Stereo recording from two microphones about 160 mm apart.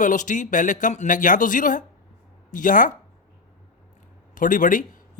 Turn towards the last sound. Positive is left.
turn(degrees=55)  # may be behind; listen again after turning